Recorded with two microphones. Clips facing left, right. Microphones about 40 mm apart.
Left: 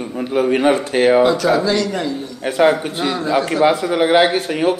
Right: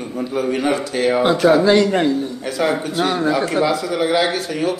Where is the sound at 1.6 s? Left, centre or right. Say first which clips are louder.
Right 4 dB; right.